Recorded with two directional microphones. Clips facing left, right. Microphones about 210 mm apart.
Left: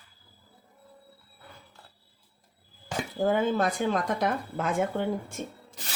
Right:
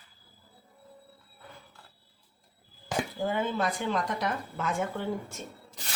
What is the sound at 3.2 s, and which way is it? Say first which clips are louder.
Speech: left 6 dB; 45° left (ahead or behind).